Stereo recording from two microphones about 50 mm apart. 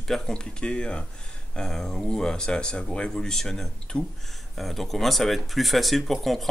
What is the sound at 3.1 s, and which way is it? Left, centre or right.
Speech, centre.